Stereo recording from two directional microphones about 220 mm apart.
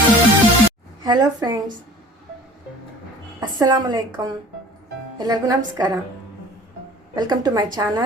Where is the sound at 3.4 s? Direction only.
20° right (ahead or behind).